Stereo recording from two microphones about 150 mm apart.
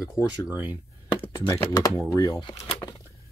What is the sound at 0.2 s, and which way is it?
Speech, 20° left (ahead or behind).